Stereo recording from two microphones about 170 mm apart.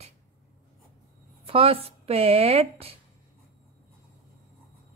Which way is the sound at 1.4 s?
35° right (ahead or behind).